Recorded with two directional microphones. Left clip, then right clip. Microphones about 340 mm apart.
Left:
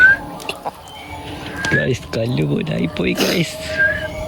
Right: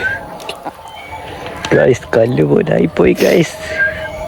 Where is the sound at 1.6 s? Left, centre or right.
Centre.